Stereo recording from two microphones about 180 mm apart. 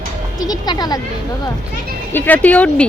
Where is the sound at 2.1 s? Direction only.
10° left (ahead or behind).